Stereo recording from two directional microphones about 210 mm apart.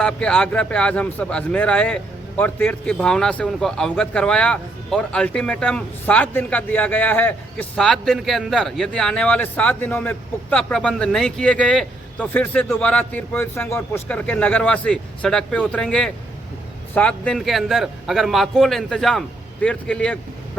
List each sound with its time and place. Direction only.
0.0 s speech: 5° left (ahead or behind)